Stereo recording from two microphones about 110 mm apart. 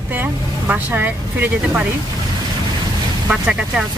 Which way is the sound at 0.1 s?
15° right (ahead or behind).